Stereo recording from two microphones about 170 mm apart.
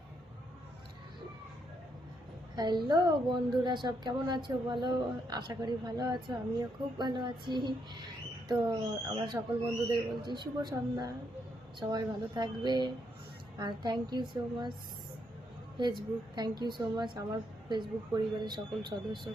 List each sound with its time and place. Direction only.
2.6 s a woman's voice: 25° right (ahead or behind)
15.8 s a woman's voice: 25° right (ahead or behind)